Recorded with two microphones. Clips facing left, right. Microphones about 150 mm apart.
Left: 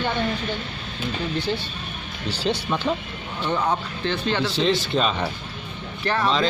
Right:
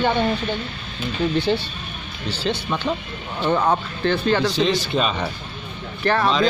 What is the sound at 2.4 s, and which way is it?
Speech, 5° left (ahead or behind).